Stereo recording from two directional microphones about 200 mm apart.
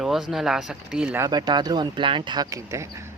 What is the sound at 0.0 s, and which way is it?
Speech, centre (ahead or behind).